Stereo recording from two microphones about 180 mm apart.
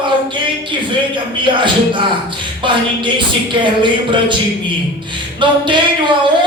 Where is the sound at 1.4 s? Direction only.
25° right (ahead or behind).